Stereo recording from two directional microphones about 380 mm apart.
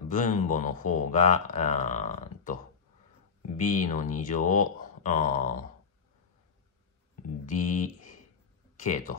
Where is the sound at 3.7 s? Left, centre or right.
Centre.